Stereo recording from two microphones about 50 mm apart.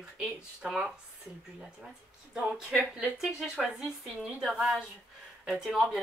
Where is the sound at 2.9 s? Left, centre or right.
Centre.